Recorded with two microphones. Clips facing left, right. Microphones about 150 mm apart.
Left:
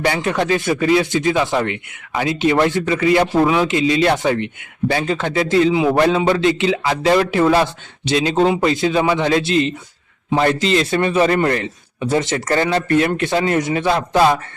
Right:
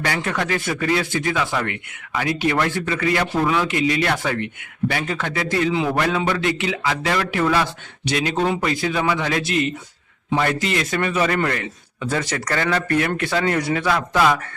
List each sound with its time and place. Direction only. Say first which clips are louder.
0.0 s speech: left 5 dB; 25° left (ahead or behind)